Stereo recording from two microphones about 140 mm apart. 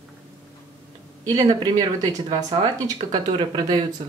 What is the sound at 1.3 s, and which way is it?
Speech, 30° right (ahead or behind).